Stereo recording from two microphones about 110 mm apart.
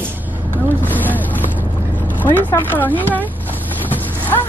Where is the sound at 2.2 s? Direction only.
15° left (ahead or behind).